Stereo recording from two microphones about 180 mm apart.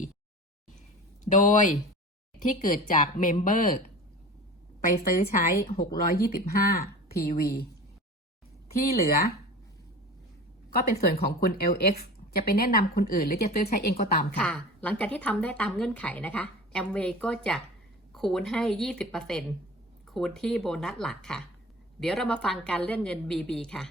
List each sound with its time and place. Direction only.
1.3 s speech: 45° left (ahead or behind)
4.9 s a woman's voice: 35° left (ahead or behind)
6.0 s speech: 55° left (ahead or behind)
9.0 s speech: 60° left (ahead or behind)
10.7 s speech: 60° left (ahead or behind)
14.3 s a woman's voice: 5° left (ahead or behind)